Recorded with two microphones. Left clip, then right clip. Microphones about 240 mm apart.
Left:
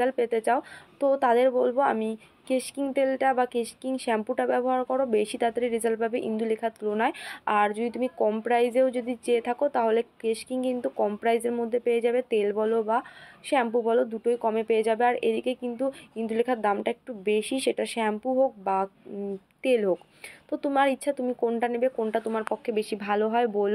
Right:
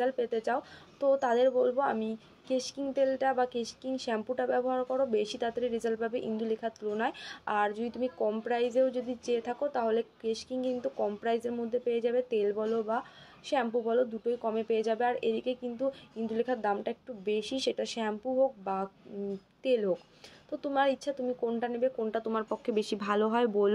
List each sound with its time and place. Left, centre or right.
0.0 s speech: left
22.3 s speech: centre